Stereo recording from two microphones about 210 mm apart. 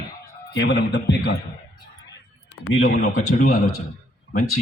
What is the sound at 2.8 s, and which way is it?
Speech, 40° left (ahead or behind).